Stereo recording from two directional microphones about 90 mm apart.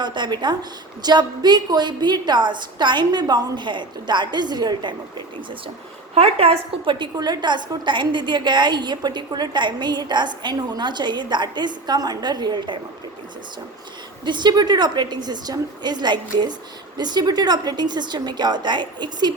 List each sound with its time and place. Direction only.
0.0 s a woman's voice: 55° right (ahead or behind)
6.3 s a woman's voice: 90° right; by 12.8 s 60° right (ahead or behind)
14.3 s a woman's voice: 55° right (ahead or behind)